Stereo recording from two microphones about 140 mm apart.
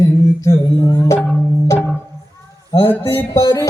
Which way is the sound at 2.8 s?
15° left (ahead or behind).